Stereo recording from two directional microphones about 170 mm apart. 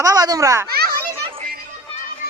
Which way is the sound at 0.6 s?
65° right (ahead or behind).